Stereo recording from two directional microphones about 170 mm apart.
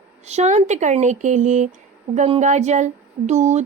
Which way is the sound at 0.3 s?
40° right (ahead or behind).